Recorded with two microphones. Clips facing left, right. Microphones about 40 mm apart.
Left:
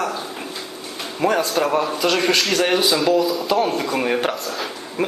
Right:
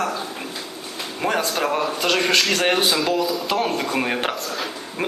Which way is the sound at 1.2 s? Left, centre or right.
Right.